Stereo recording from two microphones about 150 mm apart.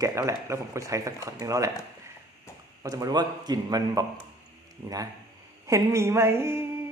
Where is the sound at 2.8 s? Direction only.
25° right (ahead or behind).